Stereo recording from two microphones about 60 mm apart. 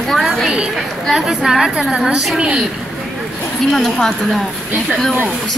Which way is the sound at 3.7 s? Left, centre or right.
Centre.